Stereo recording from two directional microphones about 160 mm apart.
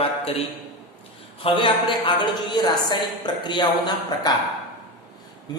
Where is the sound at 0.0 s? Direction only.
35° left (ahead or behind).